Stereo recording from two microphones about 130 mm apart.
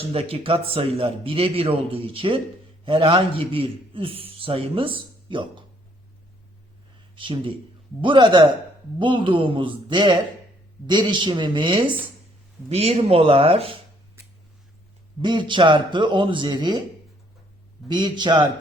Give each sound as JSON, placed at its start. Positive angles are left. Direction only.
{"t": 0.0, "sound": "a man's voice", "side_deg": -45}
{"t": 7.2, "sound": "speech", "side_deg": -40}
{"t": 12.6, "sound": "a man's voice", "side_deg": -55}
{"t": 15.2, "sound": "speech", "side_deg": -35}
{"t": 17.8, "sound": "speech", "side_deg": -35}